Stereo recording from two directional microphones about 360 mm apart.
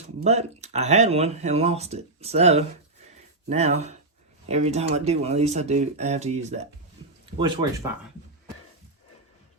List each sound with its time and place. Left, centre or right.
0.3 s speech: centre